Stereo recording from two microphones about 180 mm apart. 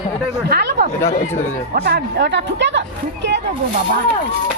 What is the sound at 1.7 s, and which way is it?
Speech, 65° right (ahead or behind).